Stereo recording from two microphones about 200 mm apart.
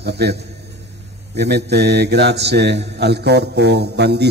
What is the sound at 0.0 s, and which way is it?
Speech, 55° right (ahead or behind).